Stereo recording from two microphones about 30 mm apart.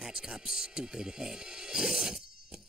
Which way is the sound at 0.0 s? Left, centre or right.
Centre.